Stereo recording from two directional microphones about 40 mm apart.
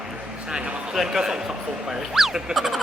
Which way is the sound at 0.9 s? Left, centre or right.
Centre.